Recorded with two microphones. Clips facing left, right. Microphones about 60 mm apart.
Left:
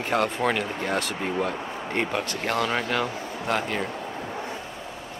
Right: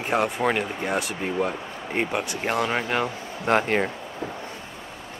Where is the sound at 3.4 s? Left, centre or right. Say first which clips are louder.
Right 6 dB; right.